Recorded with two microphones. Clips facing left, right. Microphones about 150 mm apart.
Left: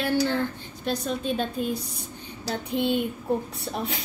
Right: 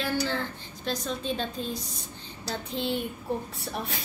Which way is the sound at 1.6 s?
10° left (ahead or behind).